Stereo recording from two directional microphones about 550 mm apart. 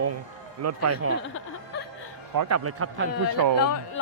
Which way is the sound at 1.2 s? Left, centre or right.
Centre.